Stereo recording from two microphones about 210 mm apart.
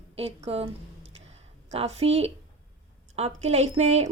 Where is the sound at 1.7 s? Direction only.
30° right (ahead or behind).